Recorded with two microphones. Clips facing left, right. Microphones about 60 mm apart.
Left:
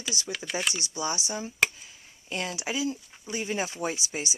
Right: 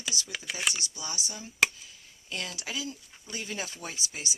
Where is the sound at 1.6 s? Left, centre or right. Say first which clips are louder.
Even; centre.